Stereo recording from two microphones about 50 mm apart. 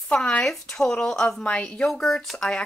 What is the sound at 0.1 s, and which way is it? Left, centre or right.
Speech, left.